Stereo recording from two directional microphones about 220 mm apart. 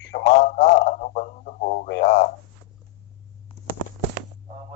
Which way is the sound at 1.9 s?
50° left (ahead or behind).